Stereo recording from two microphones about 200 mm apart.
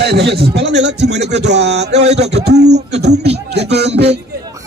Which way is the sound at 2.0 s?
35° right (ahead or behind).